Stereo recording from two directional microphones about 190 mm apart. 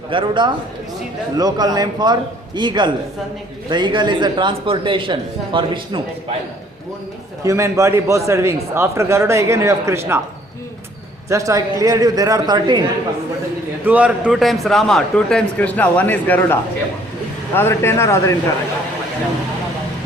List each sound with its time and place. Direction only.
0.1 s a man's voice: 25° right (ahead or behind)
7.4 s a man's voice: 15° right (ahead or behind)
11.3 s a man's voice: 15° right (ahead or behind)
13.8 s a man's voice: 5° right (ahead or behind); by 18.3 s 15° left (ahead or behind)